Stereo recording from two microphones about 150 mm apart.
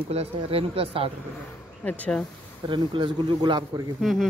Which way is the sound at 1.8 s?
10° left (ahead or behind).